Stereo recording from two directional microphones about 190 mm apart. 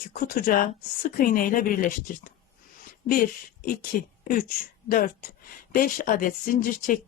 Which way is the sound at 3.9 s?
50° left (ahead or behind).